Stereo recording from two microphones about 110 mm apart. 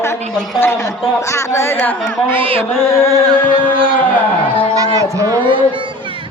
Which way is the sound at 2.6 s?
25° left (ahead or behind).